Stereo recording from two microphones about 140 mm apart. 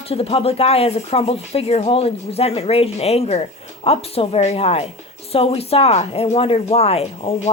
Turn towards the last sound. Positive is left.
turn(degrees=45)  # may be behind; listen again after turning